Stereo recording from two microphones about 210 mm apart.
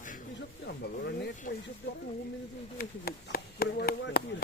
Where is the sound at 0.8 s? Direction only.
50° left (ahead or behind).